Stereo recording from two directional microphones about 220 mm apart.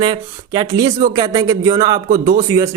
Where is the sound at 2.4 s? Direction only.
15° right (ahead or behind).